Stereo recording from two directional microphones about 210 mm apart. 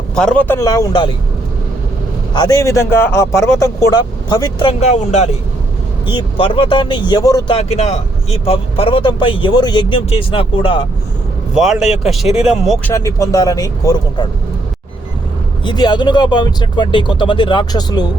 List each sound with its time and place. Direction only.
0.2 s a man's voice: 5° left (ahead or behind)
2.3 s a man's voice: 20° left (ahead or behind)
4.8 s speech: 30° left (ahead or behind); by 7.5 s 15° left (ahead or behind)
7.5 s speech: 30° left (ahead or behind)
11.5 s speech: centre (ahead or behind)
12.9 s a man's voice: 15° left (ahead or behind)
15.6 s speech: 20° left (ahead or behind)